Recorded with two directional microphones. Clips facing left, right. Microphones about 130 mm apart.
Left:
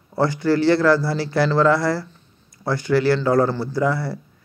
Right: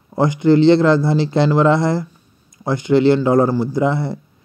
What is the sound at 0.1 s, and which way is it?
A man's voice, 20° right (ahead or behind).